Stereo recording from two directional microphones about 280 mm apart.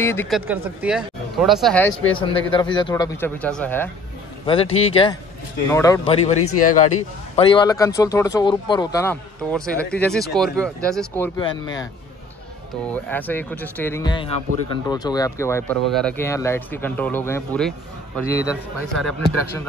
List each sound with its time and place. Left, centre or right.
0.0 s speech: centre
0.5 s speech: centre
2.2 s speech: centre
4.7 s speech: left
7.3 s speech: centre
9.1 s speech: centre
11.6 s a man's voice: left
12.9 s speech: centre